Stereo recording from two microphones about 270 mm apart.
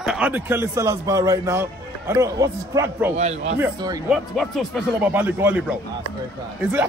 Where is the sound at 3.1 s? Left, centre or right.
Right.